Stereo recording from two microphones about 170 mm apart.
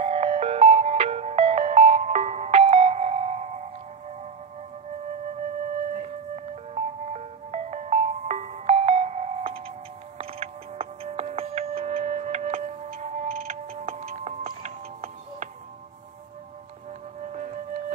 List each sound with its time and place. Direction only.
0.0 s music: 40° right (ahead or behind)
6.0 s music: 40° right (ahead or behind)
17.2 s music: 45° right (ahead or behind)